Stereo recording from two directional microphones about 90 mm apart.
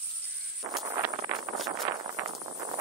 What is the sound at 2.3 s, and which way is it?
Horse, 70° right (ahead or behind).